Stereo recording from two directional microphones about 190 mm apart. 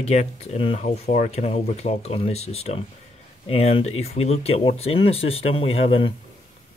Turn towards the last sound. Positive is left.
turn(degrees=30)  # may be behind; listen again after turning